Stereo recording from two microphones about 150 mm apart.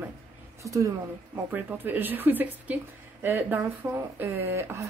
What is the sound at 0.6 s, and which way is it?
A woman's voice, 20° right (ahead or behind).